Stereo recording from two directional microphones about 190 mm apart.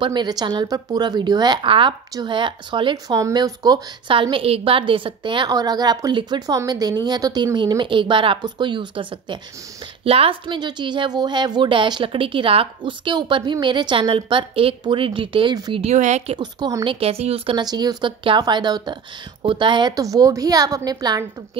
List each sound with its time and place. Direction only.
0.0 s a woman's voice: 25° right (ahead or behind)
15.8 s a woman's voice: 35° right (ahead or behind)
16.3 s a woman's voice: 20° right (ahead or behind)